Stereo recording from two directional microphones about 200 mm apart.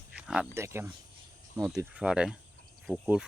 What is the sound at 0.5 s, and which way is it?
Speech, 15° right (ahead or behind).